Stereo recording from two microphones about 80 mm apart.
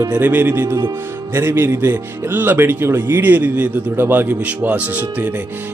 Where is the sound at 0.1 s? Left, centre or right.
Right.